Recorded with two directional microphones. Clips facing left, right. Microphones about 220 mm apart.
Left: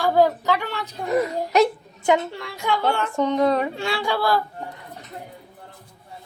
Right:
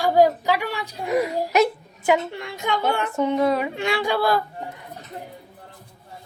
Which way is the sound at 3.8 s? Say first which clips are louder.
Right 2 dB; 20° right (ahead or behind).